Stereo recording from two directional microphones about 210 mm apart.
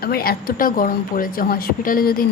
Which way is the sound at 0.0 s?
45° left (ahead or behind).